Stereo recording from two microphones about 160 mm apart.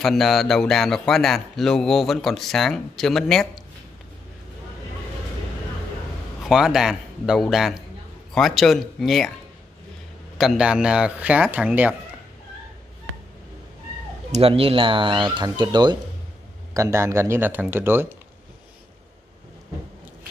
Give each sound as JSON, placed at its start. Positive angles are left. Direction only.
{"t": 0.0, "sound": "speech", "side_deg": 0}
{"t": 6.4, "sound": "speech", "side_deg": 0}
{"t": 10.3, "sound": "speech", "side_deg": 0}
{"t": 14.3, "sound": "speech", "side_deg": -35}